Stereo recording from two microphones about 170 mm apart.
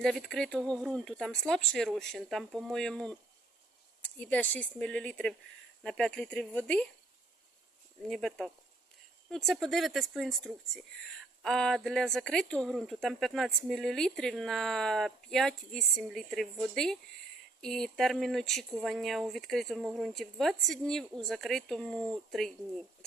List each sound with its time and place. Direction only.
0.0 s speech: centre (ahead or behind)
8.1 s speech: centre (ahead or behind)